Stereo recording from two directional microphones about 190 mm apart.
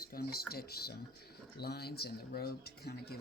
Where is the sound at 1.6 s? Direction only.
55° left (ahead or behind).